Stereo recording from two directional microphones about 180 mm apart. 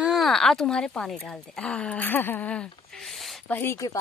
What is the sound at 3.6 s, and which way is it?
Speech, 15° left (ahead or behind).